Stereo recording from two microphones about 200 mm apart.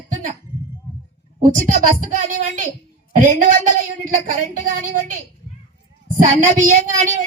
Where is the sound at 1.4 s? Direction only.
40° right (ahead or behind).